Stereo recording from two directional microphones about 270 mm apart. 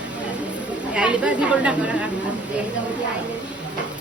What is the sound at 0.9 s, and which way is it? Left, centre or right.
Speech, centre.